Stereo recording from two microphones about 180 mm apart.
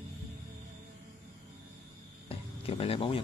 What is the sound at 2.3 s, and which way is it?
Speech, 30° left (ahead or behind).